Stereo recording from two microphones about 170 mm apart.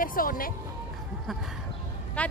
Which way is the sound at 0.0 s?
55° left (ahead or behind).